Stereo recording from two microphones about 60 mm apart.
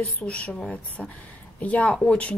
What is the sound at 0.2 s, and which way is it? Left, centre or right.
A woman's voice, left.